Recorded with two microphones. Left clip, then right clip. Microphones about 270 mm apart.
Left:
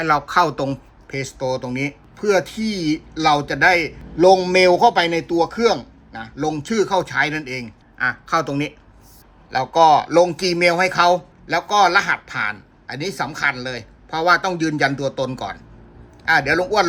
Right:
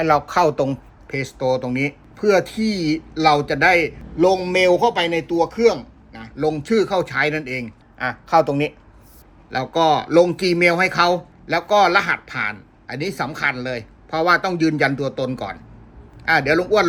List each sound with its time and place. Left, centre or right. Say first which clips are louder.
0.0 s speech: even; centre
4.2 s a man's voice: left 3 dB; centre